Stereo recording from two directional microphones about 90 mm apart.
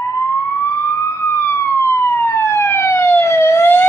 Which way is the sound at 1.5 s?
30° left (ahead or behind).